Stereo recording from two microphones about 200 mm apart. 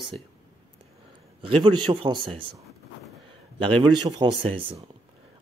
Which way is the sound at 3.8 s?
25° right (ahead or behind).